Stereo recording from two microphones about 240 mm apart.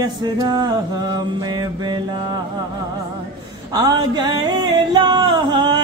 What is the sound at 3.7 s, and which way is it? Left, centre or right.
Music, centre.